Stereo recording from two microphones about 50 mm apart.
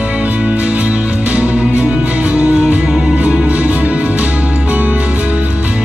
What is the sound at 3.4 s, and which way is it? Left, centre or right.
Music, right.